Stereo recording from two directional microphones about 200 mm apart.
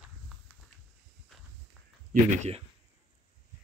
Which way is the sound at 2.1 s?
35° right (ahead or behind).